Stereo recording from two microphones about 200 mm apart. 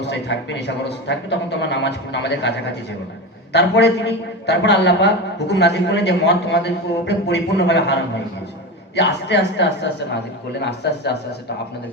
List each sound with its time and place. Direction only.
0.0 s a man's voice: 60° left (ahead or behind)
9.0 s a man's voice: 60° left (ahead or behind)